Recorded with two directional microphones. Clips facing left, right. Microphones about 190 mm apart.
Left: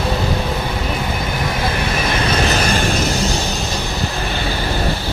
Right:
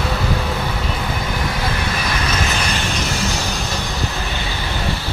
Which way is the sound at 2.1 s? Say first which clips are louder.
Left 4 dB; 35° left (ahead or behind).